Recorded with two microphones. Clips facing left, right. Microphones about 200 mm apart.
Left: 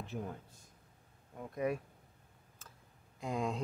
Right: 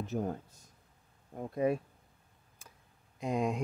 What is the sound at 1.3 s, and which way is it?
Speech, 30° right (ahead or behind).